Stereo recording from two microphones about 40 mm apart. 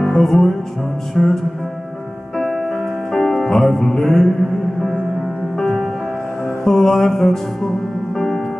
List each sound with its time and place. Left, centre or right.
0.0 s music: centre
5.6 s music: centre